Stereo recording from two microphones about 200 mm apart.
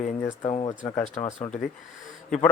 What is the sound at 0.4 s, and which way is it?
Speech, 25° left (ahead or behind).